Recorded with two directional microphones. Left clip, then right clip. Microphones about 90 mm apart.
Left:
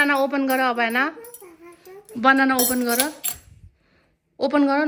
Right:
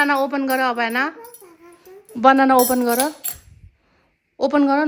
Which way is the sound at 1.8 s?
35° right (ahead or behind).